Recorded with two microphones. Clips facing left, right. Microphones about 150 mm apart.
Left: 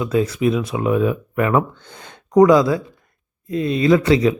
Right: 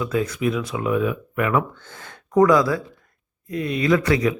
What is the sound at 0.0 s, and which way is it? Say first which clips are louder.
Speech: left 4 dB; 25° left (ahead or behind).